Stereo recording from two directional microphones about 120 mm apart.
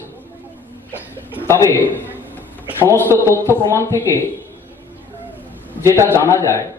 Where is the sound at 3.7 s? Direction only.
20° left (ahead or behind).